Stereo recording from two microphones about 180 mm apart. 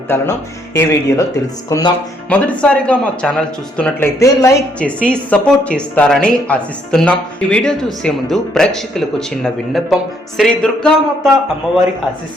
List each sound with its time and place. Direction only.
0.1 s speech: 10° left (ahead or behind)
2.3 s speech: 5° left (ahead or behind)
4.2 s speech: 15° left (ahead or behind)